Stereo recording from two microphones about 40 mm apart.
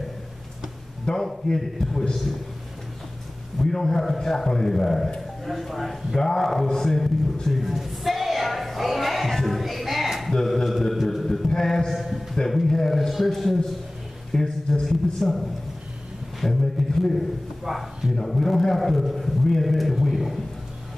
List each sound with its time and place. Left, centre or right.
1.1 s a man's voice: left
3.5 s a man's voice: centre
7.4 s a sound: centre
9.3 s music: centre
10.3 s mantra: centre
11.9 s a sound: centre
14.3 s a man's voice: centre
18.1 s a man's voice: centre